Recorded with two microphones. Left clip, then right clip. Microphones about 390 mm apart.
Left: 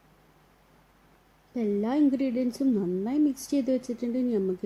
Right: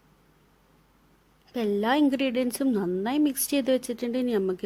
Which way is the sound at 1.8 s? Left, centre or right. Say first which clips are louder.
Right 3 dB; right.